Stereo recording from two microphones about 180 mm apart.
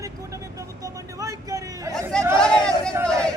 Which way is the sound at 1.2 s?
20° right (ahead or behind).